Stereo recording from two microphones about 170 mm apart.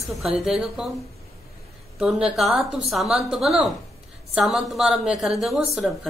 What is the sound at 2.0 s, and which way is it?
A woman's voice, 5° right (ahead or behind).